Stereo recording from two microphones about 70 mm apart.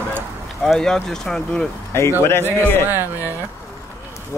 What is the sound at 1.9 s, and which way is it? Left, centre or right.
Speech, left.